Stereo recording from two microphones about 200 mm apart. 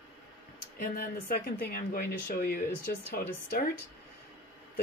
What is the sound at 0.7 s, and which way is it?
Speech, 50° left (ahead or behind).